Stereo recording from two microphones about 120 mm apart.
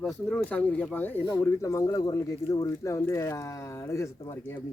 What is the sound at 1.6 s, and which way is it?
Speech, 25° left (ahead or behind).